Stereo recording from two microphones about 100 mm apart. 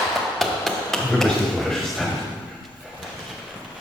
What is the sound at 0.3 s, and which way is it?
Hammer, 5° left (ahead or behind).